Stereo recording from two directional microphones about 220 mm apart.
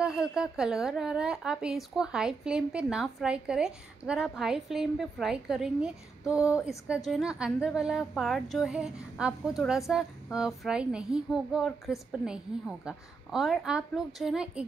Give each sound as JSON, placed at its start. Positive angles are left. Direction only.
{"t": 0.0, "sound": "a woman's voice", "side_deg": -5}